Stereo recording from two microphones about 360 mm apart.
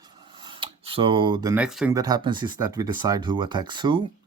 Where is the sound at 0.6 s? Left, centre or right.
Centre.